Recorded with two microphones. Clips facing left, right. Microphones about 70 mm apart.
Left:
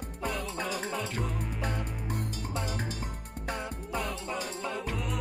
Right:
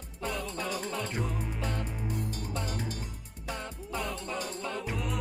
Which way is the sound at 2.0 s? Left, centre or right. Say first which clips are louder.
Right 1 dB; left.